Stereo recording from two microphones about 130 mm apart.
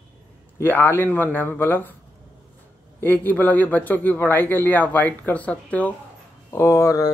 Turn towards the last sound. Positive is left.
turn(degrees=25)  # may be behind; listen again after turning